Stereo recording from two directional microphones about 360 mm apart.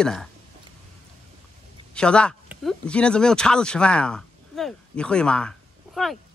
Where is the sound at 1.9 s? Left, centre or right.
Centre.